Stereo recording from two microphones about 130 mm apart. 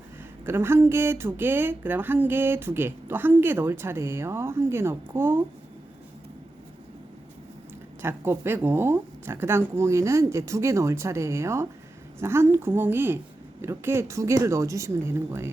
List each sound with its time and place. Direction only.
0.4 s speech: 20° right (ahead or behind)
8.0 s speech: 20° right (ahead or behind)